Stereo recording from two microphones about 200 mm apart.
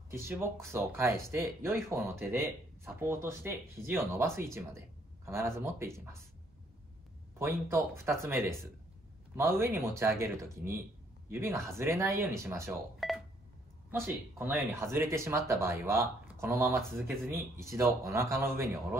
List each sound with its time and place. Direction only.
0.1 s speech: 10° right (ahead or behind)
7.3 s speech: 10° right (ahead or behind)
13.0 s telephone dialing: centre (ahead or behind)
13.8 s speech: 10° right (ahead or behind)